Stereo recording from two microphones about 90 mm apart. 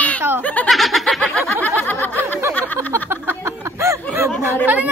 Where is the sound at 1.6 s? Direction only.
20° left (ahead or behind).